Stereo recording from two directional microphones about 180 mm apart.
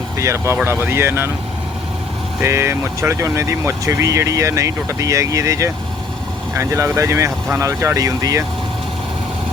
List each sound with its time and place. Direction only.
0.2 s speech: 15° right (ahead or behind)
2.4 s speech: 15° right (ahead or behind)